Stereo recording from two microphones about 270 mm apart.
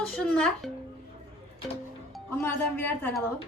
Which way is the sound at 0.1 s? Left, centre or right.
Centre.